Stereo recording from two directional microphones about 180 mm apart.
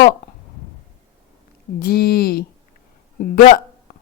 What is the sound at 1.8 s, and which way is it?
Speech, 55° left (ahead or behind).